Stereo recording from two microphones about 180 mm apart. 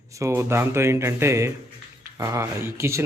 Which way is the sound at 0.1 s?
15° right (ahead or behind).